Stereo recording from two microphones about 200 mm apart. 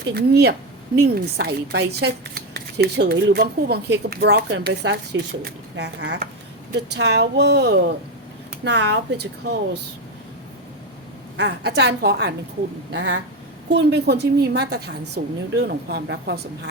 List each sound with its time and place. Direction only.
0.1 s speech: 55° right (ahead or behind)
11.3 s speech: 60° right (ahead or behind)